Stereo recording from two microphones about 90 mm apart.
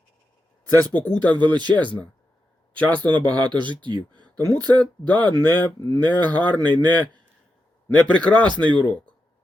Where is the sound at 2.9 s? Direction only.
15° left (ahead or behind).